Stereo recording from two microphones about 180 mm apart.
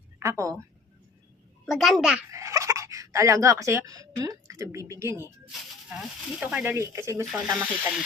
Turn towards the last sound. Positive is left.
turn(degrees=-10)  # may be behind; listen again after turning